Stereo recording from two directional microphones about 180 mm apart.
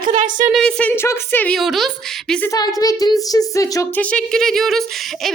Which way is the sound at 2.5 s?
20° left (ahead or behind).